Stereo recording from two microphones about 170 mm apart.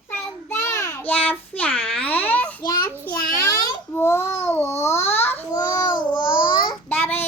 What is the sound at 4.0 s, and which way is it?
Babbling, 15° left (ahead or behind).